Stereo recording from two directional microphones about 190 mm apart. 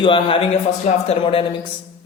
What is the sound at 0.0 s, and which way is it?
A man's voice, 25° left (ahead or behind).